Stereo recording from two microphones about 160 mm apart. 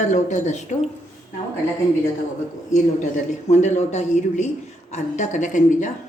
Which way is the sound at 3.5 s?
45° left (ahead or behind).